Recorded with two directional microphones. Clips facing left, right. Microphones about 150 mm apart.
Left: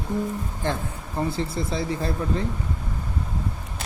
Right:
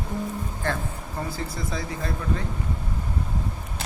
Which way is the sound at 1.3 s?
30° left (ahead or behind).